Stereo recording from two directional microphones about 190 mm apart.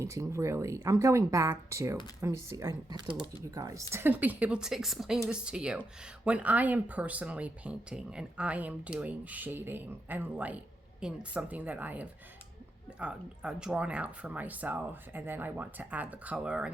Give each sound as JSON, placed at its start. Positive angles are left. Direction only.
{"t": 0.0, "sound": "speech", "side_deg": -15}